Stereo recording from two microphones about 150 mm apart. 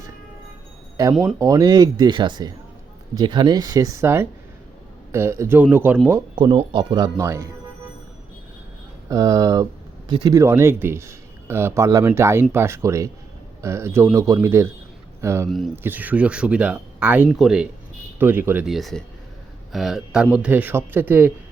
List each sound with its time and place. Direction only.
1.4 s speech: 25° right (ahead or behind)
6.3 s speech: 35° right (ahead or behind)
9.0 s speech: 20° right (ahead or behind)
10.1 s speech: 35° right (ahead or behind)
10.3 s speech: 15° right (ahead or behind)
15.4 s speech: centre (ahead or behind)
15.7 s speech: 15° right (ahead or behind)
18.2 s speech: 15° right (ahead or behind)
18.6 s speech: centre (ahead or behind)